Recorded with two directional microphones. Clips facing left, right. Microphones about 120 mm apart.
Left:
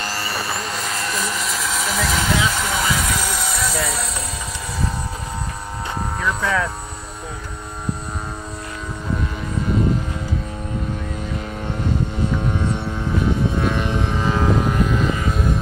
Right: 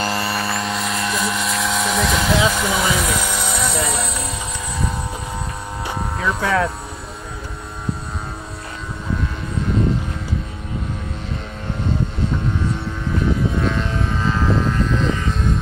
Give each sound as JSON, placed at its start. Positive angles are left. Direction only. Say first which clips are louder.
{"t": 0.1, "sound": "vehicle", "louder": "right 4 dB", "side_deg": 0}
{"t": 6.2, "sound": "speech", "louder": "right 3 dB", "side_deg": -30}
{"t": 13.7, "sound": "vehicle", "louder": "left 1 dB", "side_deg": 15}